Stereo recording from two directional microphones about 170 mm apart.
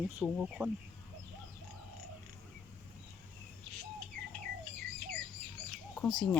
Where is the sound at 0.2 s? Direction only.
5° right (ahead or behind).